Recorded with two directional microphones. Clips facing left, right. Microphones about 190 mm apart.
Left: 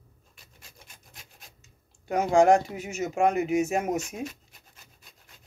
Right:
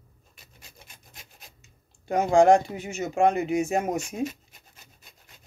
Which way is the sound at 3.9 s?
Centre (ahead or behind).